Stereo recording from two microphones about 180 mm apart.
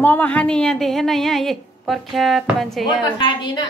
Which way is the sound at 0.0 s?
10° left (ahead or behind).